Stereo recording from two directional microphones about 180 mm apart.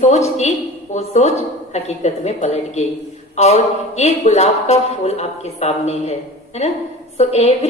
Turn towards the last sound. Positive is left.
turn(degrees=35)  # may be behind; listen again after turning